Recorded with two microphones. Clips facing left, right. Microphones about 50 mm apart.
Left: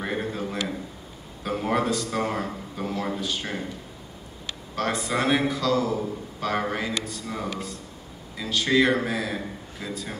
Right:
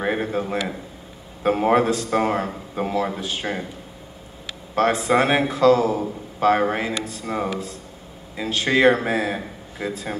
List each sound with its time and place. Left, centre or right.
0.0 s a sound: right
1.4 s a man's voice: right
5.0 s a man's voice: right
5.8 s speech: right
6.4 s a man's voice: right